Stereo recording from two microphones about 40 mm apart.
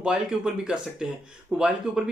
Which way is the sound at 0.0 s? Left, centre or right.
Right.